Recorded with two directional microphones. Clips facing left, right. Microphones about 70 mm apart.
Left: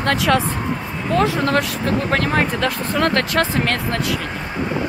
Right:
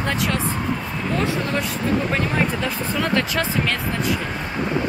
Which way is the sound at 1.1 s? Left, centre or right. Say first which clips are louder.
Left 6 dB; left.